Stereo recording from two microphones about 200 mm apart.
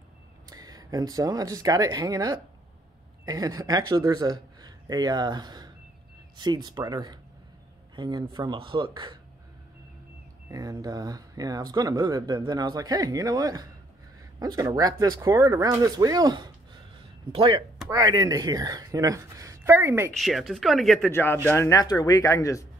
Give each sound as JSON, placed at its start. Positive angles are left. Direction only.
{"t": 0.5, "sound": "speech", "side_deg": -20}
{"t": 10.5, "sound": "speech", "side_deg": -20}
{"t": 20.2, "sound": "speech", "side_deg": 0}
{"t": 21.1, "sound": "speech", "side_deg": 10}